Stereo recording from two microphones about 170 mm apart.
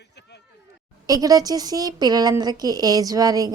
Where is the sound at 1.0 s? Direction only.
20° right (ahead or behind).